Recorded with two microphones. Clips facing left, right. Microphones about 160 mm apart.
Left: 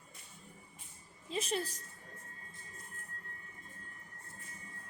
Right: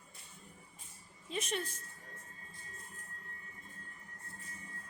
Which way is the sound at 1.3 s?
30° left (ahead or behind).